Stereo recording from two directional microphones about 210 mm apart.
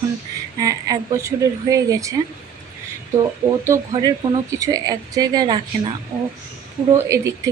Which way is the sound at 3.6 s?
15° right (ahead or behind).